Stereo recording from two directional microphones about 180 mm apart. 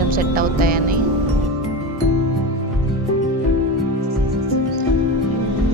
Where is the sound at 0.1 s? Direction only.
55° right (ahead or behind).